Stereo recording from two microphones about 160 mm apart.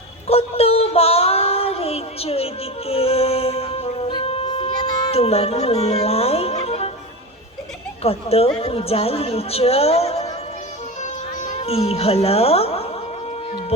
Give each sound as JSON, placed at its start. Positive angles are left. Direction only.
{"t": 0.3, "sound": "child singing", "side_deg": 40}
{"t": 5.1, "sound": "music", "side_deg": 40}
{"t": 8.0, "sound": "a woman's voice", "side_deg": 40}
{"t": 11.0, "sound": "music", "side_deg": 45}